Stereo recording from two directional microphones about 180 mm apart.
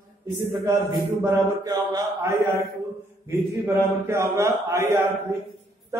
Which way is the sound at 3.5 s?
15° right (ahead or behind).